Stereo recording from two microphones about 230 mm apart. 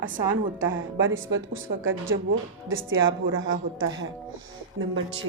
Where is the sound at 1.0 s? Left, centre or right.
Right.